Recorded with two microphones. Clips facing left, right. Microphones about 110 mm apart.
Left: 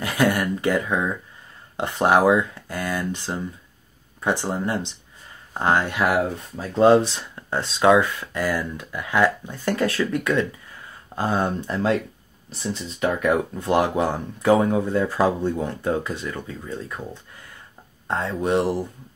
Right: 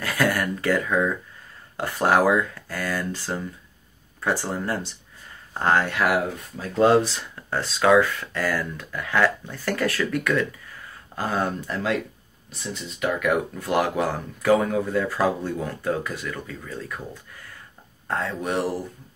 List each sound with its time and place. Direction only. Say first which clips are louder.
0.0 s speech: left 2 dB; 20° left (ahead or behind)